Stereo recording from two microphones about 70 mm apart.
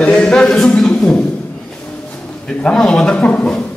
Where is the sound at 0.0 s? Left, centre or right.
Centre.